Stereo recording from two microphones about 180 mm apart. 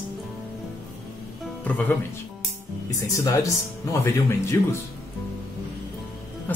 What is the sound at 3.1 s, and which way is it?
A man's voice, 20° left (ahead or behind).